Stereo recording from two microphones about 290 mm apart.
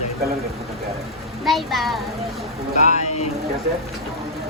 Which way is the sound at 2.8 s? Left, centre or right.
Left.